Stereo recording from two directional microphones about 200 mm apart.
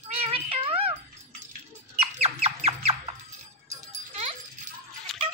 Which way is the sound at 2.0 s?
30° right (ahead or behind).